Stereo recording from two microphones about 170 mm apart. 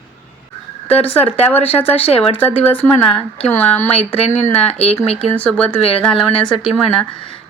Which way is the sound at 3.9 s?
35° left (ahead or behind).